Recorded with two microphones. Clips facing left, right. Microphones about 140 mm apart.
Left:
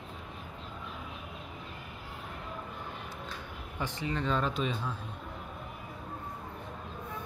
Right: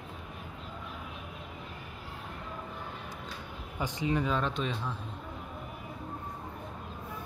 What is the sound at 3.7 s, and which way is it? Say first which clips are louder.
Speech: right 4 dB; 15° right (ahead or behind).